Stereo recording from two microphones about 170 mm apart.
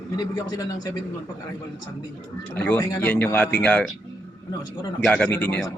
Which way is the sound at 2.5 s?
10° left (ahead or behind).